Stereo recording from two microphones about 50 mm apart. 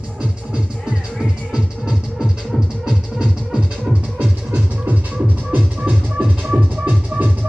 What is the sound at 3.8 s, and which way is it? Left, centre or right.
Music, centre.